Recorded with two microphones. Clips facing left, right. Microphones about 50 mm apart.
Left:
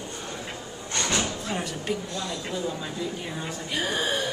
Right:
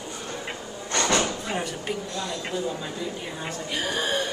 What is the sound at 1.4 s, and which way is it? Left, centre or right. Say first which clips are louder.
A woman's voice: right 1 dB; centre.